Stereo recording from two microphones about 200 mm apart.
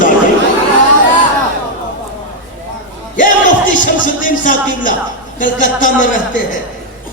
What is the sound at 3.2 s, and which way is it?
Music, 40° left (ahead or behind).